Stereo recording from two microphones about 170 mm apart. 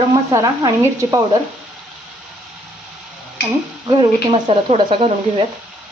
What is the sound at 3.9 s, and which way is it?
Speech, 30° right (ahead or behind).